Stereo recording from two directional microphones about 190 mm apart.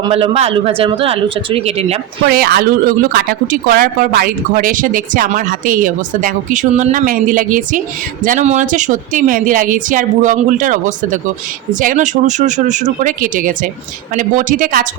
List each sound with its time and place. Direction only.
0.0 s a man's voice: 30° right (ahead or behind)
2.3 s speech: 55° right (ahead or behind)